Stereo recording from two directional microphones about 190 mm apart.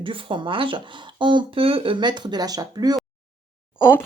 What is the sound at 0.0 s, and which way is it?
Speech, 25° right (ahead or behind).